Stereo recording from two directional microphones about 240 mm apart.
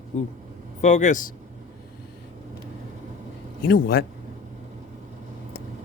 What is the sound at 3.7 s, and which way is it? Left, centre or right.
Speech, left.